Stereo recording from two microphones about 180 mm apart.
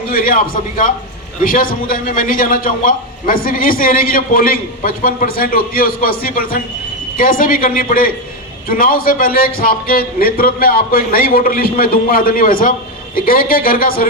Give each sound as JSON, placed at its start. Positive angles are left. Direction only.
{"t": 0.1, "sound": "a man's voice", "side_deg": 55}